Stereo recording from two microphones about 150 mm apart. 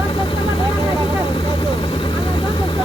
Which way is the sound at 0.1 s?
35° left (ahead or behind).